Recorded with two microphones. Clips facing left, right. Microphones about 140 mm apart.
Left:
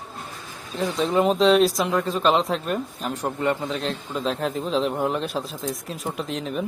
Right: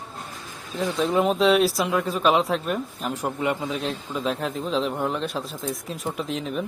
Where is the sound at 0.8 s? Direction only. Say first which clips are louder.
Left 1 dB; centre (ahead or behind).